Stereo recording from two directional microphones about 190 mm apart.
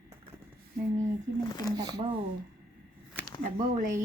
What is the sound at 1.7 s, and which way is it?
Speech, 20° right (ahead or behind).